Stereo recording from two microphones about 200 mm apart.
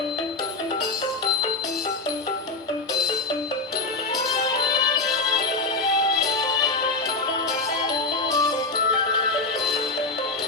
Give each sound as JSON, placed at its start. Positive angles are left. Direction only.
{"t": 8.3, "sound": "music", "side_deg": 20}